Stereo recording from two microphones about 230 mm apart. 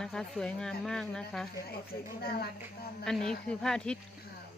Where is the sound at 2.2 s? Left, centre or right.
Left.